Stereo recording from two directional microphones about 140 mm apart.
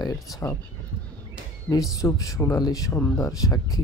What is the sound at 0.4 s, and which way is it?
Speech, 20° left (ahead or behind).